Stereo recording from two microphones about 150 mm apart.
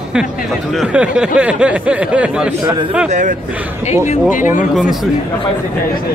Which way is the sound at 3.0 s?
55° right (ahead or behind).